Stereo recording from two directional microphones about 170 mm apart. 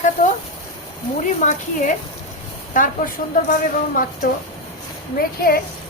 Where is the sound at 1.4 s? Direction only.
45° left (ahead or behind).